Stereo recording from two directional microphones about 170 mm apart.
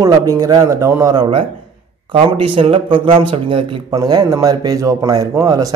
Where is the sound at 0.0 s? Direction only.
20° right (ahead or behind).